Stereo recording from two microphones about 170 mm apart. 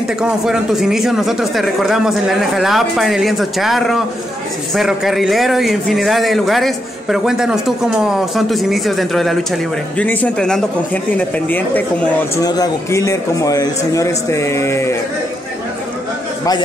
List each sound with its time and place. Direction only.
0.2 s a man's voice: 5° right (ahead or behind)
12.4 s a man's voice: 20° left (ahead or behind)